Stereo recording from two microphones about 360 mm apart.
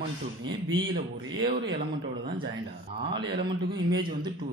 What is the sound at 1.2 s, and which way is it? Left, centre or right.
Speech, right.